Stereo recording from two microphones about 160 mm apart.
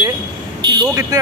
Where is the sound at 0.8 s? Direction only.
20° right (ahead or behind).